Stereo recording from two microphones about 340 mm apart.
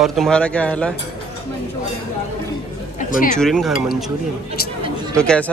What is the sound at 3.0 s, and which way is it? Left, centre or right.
Speech, left.